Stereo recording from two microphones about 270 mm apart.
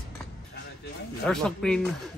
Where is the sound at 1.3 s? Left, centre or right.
Centre.